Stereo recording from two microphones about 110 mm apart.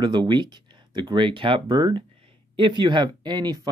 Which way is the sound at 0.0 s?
45° right (ahead or behind).